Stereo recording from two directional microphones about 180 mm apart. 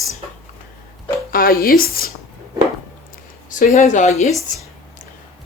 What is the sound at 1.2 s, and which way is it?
Speech, 55° left (ahead or behind).